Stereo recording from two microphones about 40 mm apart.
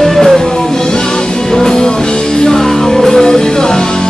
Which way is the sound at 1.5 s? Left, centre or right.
Centre.